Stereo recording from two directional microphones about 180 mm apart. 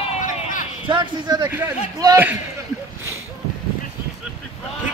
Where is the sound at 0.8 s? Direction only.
25° right (ahead or behind).